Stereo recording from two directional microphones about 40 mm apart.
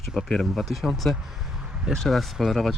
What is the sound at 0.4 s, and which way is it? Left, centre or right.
Speech, centre.